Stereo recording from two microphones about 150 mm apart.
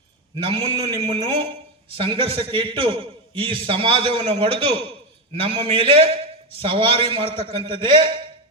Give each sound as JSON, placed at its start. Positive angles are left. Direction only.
{"t": 0.3, "sound": "a man's voice", "side_deg": -35}